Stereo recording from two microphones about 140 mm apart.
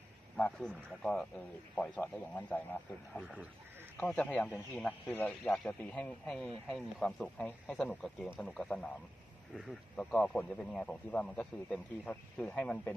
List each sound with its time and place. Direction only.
0.4 s speech: 5° left (ahead or behind)
3.2 s speech: centre (ahead or behind)
4.0 s speech: 10° left (ahead or behind)